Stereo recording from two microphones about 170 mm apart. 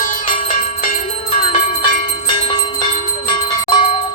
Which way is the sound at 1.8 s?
30° left (ahead or behind).